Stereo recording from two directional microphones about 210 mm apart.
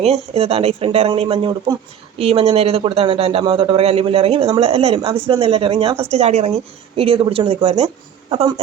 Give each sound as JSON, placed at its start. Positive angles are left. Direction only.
{"t": 0.0, "sound": "speech", "side_deg": -30}